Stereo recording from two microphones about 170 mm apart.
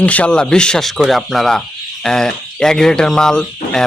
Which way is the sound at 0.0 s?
10° left (ahead or behind).